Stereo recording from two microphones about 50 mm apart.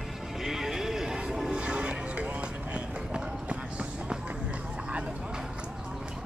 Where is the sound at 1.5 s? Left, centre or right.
Right.